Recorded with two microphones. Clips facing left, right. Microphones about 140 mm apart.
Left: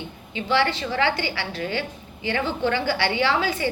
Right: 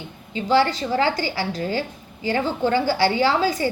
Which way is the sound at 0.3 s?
40° right (ahead or behind).